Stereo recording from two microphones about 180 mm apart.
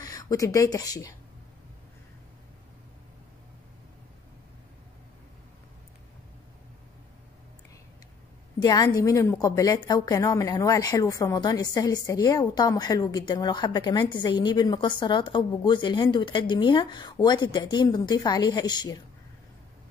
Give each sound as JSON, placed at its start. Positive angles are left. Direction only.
{"t": 0.0, "sound": "speech", "side_deg": 20}
{"t": 8.6, "sound": "a woman's voice", "side_deg": 20}